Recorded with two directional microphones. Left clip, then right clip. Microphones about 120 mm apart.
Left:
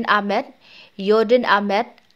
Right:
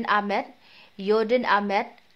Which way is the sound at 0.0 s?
35° left (ahead or behind).